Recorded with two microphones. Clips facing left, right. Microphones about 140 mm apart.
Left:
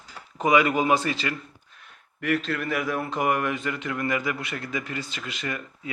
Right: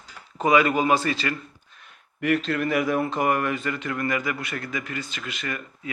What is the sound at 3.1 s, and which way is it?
A man's voice, 10° left (ahead or behind).